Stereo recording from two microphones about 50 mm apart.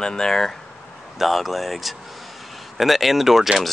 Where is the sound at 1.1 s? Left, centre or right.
Centre.